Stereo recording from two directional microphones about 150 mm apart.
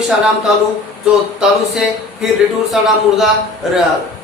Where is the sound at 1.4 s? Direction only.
5° right (ahead or behind).